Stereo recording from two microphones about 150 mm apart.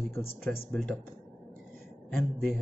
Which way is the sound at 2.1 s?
15° left (ahead or behind).